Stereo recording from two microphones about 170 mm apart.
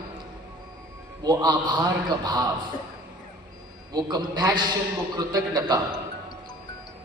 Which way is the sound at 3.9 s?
25° right (ahead or behind).